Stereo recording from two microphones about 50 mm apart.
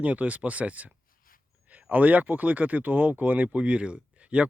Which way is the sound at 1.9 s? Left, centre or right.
Right.